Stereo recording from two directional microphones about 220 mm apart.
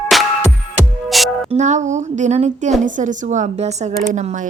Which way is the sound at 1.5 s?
35° right (ahead or behind).